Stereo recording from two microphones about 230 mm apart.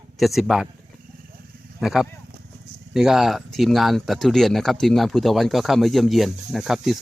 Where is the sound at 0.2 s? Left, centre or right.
Centre.